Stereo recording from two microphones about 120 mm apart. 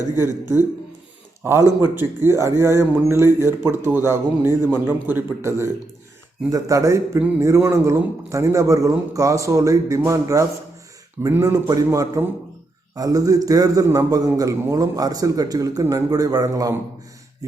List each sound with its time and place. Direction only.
1.4 s a man's voice: 20° right (ahead or behind)